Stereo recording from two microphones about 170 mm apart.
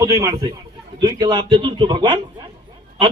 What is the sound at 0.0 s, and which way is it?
A man's voice, 20° right (ahead or behind).